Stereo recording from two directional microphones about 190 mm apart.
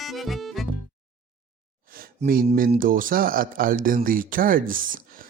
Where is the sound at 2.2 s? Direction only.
50° right (ahead or behind).